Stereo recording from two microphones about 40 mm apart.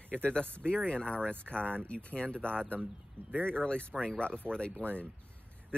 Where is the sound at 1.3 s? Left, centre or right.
Right.